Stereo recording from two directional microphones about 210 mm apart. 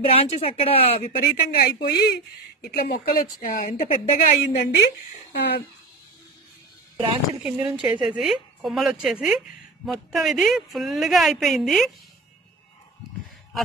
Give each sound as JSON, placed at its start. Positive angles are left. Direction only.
{"t": 0.0, "sound": "speech", "side_deg": 30}
{"t": 1.5, "sound": "speech", "side_deg": 45}
{"t": 4.7, "sound": "speech", "side_deg": 50}
{"t": 7.4, "sound": "speech", "side_deg": -5}